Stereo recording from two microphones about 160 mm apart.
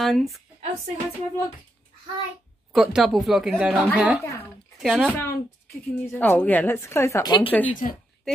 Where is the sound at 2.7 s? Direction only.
5° right (ahead or behind).